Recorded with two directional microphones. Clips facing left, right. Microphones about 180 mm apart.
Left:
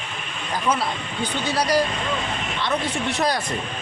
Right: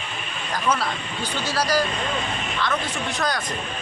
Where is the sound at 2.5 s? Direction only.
25° left (ahead or behind).